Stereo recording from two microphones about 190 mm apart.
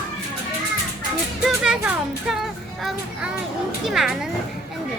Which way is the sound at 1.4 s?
5° right (ahead or behind).